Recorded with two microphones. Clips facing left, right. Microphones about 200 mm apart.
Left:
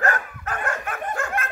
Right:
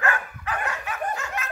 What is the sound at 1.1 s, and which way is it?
Snicker, 55° left (ahead or behind).